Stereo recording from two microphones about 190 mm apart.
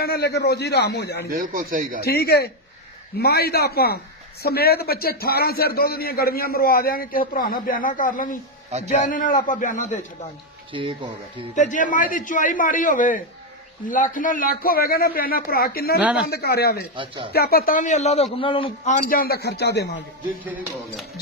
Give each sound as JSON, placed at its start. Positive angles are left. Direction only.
{"t": 0.0, "sound": "a man's voice", "side_deg": 55}
{"t": 1.3, "sound": "speech", "side_deg": -50}
{"t": 2.0, "sound": "a man's voice", "side_deg": 55}
{"t": 10.7, "sound": "speech", "side_deg": -25}
{"t": 11.5, "sound": "speech", "side_deg": 40}
{"t": 16.0, "sound": "speech", "side_deg": -5}
{"t": 16.3, "sound": "a man's voice", "side_deg": 55}
{"t": 16.9, "sound": "speech", "side_deg": -25}
{"t": 17.3, "sound": "a man's voice", "side_deg": 55}
{"t": 18.9, "sound": "a man's voice", "side_deg": 50}